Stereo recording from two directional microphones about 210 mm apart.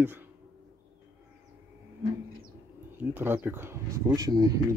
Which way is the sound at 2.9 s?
10° right (ahead or behind).